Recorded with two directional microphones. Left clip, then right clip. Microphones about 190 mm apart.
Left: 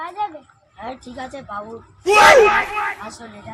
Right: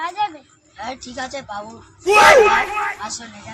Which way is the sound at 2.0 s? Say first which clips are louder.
Even; centre (ahead or behind).